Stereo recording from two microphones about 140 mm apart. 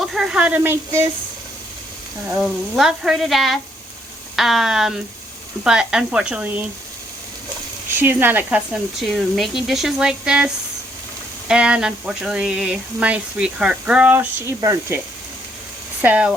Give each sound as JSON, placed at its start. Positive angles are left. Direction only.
{"t": 0.0, "sound": "speech", "side_deg": 0}
{"t": 2.3, "sound": "speech", "side_deg": -5}
{"t": 7.9, "sound": "speech", "side_deg": -15}
{"t": 16.0, "sound": "speech", "side_deg": -10}